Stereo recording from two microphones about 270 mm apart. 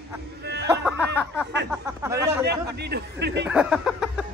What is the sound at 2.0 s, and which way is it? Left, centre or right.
Chatter, centre.